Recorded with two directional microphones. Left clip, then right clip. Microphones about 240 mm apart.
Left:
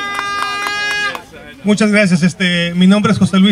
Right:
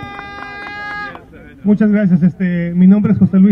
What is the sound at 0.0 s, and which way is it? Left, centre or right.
Music, right.